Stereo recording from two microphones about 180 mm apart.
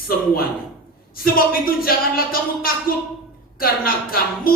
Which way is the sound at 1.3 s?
55° left (ahead or behind).